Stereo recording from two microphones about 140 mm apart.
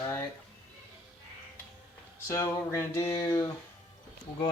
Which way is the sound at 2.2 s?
20° left (ahead or behind).